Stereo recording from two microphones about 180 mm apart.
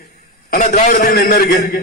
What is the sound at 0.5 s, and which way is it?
A man's voice, 50° left (ahead or behind).